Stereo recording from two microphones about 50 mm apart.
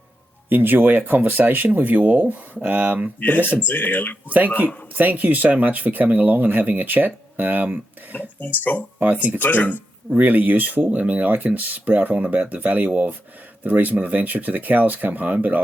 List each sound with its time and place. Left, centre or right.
0.5 s speech: right
3.2 s speech: left
4.3 s speech: right
8.1 s speech: left
9.0 s speech: right
9.4 s speech: left
10.2 s speech: right